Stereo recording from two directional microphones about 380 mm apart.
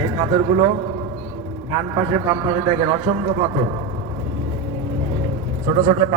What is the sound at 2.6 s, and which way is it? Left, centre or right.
Speech, centre.